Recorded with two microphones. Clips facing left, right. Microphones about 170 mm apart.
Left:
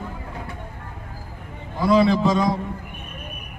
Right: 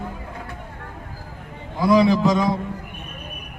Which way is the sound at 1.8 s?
10° right (ahead or behind).